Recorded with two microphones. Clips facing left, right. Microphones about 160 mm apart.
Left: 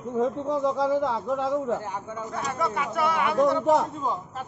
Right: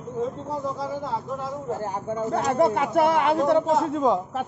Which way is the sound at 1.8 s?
40° right (ahead or behind).